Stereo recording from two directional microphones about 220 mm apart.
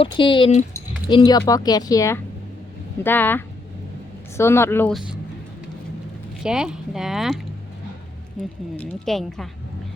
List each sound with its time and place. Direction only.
0.0 s speech: 20° left (ahead or behind); by 5.2 s centre (ahead or behind)
6.4 s speech: 5° right (ahead or behind)
8.7 s speech: 5° left (ahead or behind)